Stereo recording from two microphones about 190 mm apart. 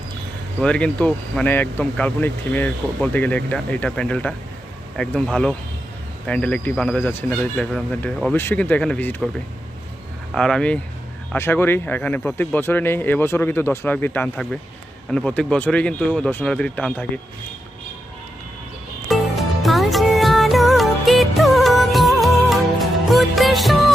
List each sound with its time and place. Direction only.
0.6 s speech: 5° left (ahead or behind)
10.3 s speech: 5° left (ahead or behind)
19.0 s music: centre (ahead or behind)